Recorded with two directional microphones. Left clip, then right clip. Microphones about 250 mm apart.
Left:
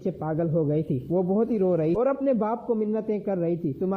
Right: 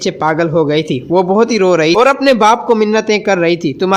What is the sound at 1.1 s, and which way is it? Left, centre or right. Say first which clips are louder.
Speech: right 14 dB; right.